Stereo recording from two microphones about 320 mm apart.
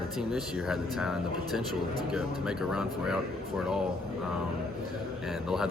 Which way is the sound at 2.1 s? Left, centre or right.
Centre.